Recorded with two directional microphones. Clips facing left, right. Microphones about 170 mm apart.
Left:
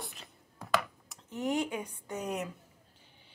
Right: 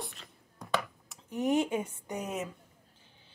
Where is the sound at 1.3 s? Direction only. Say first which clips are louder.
Right 4 dB; 20° right (ahead or behind).